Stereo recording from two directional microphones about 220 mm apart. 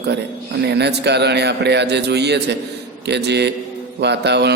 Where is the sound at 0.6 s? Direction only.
50° right (ahead or behind).